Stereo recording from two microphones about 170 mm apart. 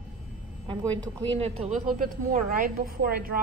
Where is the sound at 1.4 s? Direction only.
40° right (ahead or behind).